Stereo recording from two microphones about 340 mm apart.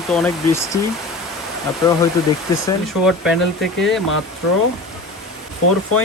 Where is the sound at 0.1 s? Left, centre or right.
Centre.